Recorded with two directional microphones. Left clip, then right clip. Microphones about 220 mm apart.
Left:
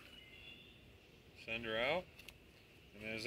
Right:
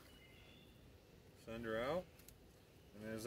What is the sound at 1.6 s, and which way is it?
Speech, 20° right (ahead or behind).